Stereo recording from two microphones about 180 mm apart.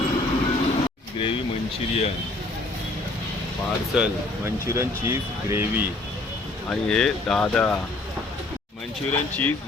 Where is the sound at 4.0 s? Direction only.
15° right (ahead or behind).